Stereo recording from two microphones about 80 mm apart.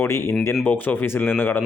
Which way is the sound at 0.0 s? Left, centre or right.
Left.